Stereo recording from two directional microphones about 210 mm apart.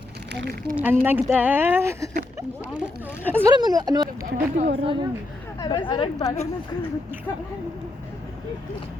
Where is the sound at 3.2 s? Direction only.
10° left (ahead or behind).